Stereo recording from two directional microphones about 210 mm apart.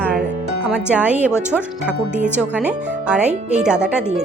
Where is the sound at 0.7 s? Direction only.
5° right (ahead or behind).